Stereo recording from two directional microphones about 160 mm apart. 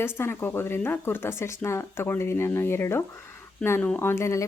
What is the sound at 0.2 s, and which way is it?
A woman's voice, 15° left (ahead or behind).